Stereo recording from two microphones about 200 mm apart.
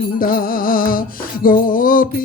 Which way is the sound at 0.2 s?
45° left (ahead or behind).